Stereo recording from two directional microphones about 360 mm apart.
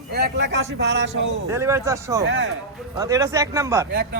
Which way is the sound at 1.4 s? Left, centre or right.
Centre.